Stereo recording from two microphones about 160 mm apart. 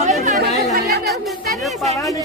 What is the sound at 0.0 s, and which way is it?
Chatter, 50° right (ahead or behind).